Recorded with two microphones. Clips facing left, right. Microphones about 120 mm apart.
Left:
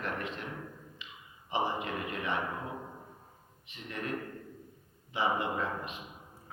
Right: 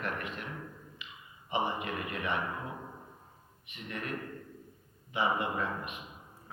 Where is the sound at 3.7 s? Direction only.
30° left (ahead or behind).